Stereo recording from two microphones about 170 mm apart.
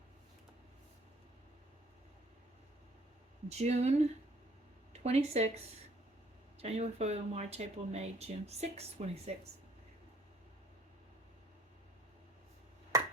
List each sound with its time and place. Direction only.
3.5 s speech: 40° right (ahead or behind)
5.0 s speech: 40° right (ahead or behind)
6.6 s speech: 40° right (ahead or behind)